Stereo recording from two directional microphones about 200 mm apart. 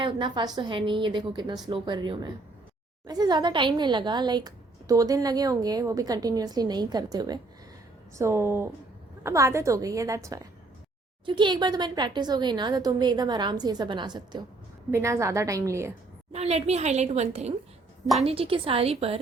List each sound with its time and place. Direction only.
0.0 s a woman's voice: 25° right (ahead or behind)
16.3 s a woman's voice: 30° right (ahead or behind)